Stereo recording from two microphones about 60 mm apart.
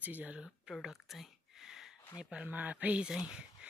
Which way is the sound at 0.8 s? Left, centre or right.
Centre.